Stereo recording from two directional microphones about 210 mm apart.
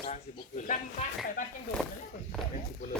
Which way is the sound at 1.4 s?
40° left (ahead or behind).